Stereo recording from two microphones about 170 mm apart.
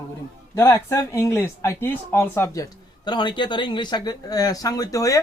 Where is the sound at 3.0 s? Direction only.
25° left (ahead or behind).